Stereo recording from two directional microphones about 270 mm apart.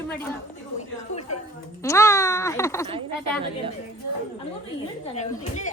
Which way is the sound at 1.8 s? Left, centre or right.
Centre.